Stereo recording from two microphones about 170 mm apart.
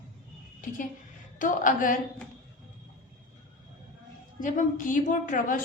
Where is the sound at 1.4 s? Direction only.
50° left (ahead or behind).